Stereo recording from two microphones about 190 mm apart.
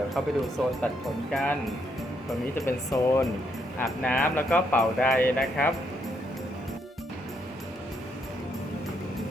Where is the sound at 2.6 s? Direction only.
15° left (ahead or behind).